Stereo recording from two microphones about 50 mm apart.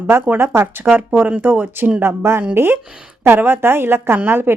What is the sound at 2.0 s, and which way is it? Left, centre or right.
Speech, right.